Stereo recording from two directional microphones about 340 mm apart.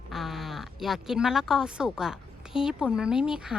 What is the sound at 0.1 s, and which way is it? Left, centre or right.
Speech, centre.